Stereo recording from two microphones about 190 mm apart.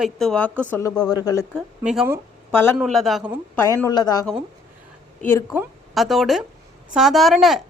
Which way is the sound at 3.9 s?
20° left (ahead or behind).